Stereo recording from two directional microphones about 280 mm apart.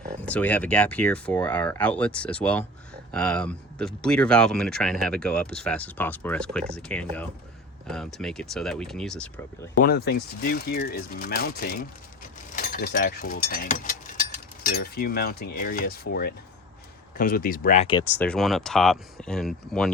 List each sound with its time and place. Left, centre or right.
0.3 s speech: centre
9.8 s speech: left
18.2 s speech: centre